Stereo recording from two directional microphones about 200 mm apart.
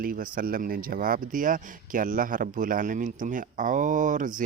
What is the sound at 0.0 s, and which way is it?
Speech, 45° right (ahead or behind).